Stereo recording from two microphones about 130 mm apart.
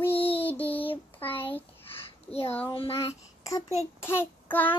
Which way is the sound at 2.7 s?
45° left (ahead or behind).